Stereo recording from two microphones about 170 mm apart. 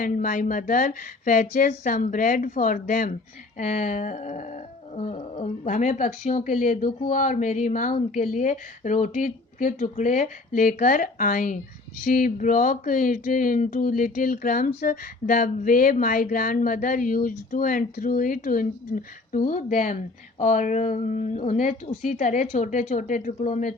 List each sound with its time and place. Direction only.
0.0 s speech: 50° left (ahead or behind)